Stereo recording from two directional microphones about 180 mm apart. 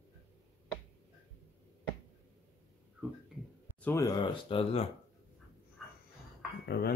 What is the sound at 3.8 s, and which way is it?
Speech, 15° left (ahead or behind).